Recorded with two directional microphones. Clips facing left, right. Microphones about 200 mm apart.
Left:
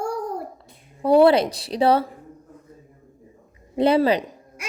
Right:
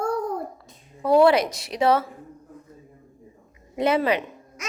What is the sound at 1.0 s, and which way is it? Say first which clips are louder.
Speech: left 2 dB; 30° left (ahead or behind).